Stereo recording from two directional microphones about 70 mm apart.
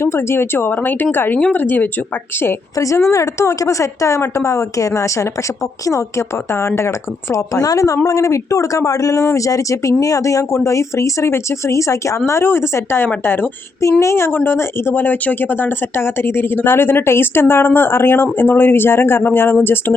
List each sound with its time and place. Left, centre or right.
0.0 s speech: left
2.7 s speech: left
7.5 s a woman's voice: left